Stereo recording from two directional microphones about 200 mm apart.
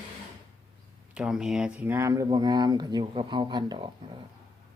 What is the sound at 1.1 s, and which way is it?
Speech, 5° right (ahead or behind).